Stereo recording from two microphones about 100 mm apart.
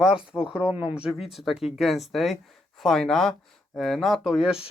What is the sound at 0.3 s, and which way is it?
Speech, 10° right (ahead or behind).